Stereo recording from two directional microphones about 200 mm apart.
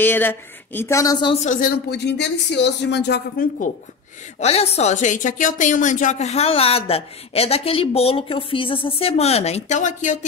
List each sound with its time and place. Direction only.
0.0 s a woman's voice: 10° left (ahead or behind)
1.3 s speech: 40° left (ahead or behind)
4.4 s a woman's voice: 30° left (ahead or behind)